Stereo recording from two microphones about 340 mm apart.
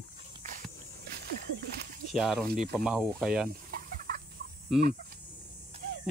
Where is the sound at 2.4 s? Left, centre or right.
Right.